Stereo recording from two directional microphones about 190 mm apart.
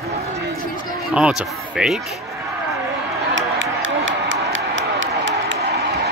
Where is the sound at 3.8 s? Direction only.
85° right; by 6.0 s 70° right (ahead or behind).